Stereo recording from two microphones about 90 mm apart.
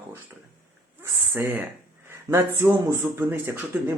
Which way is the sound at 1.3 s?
25° right (ahead or behind).